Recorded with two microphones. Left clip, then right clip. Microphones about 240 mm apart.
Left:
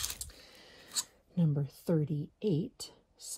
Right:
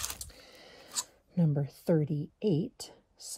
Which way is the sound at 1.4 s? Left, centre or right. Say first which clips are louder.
Right 3 dB; centre.